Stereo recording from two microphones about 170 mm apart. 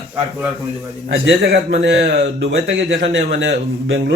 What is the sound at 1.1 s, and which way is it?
A man's voice, 75° right (ahead or behind).